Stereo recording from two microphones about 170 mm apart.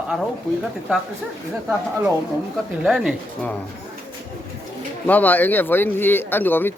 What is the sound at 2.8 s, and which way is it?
Speech, 5° right (ahead or behind).